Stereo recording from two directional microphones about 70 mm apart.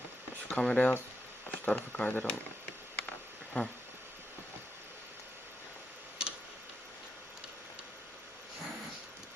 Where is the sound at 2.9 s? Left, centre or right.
Left.